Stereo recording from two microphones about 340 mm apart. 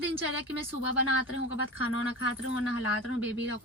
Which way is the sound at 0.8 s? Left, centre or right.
Left.